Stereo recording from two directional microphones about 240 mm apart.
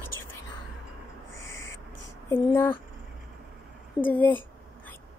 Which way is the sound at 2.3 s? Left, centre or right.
Centre.